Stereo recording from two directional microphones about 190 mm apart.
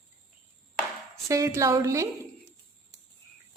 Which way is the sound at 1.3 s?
15° right (ahead or behind).